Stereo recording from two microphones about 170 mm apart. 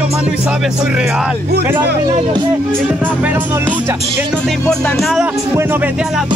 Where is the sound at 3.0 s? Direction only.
10° right (ahead or behind).